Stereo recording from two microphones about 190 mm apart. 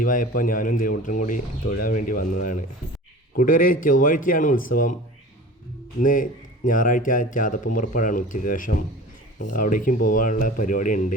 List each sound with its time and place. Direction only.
0.0 s speech: 45° left (ahead or behind)
6.0 s speech: 45° left (ahead or behind)